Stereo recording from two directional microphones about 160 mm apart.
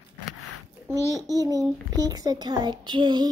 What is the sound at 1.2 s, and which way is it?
A child's voice, 25° right (ahead or behind).